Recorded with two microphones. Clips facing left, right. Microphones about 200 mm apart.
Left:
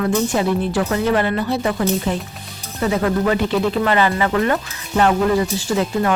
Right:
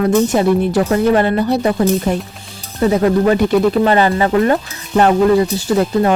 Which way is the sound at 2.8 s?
30° right (ahead or behind).